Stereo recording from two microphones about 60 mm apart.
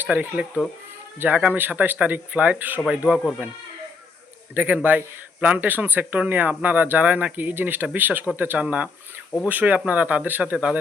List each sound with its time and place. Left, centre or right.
0.0 s speech: right
2.9 s speech: centre
4.5 s speech: right
10.4 s speech: centre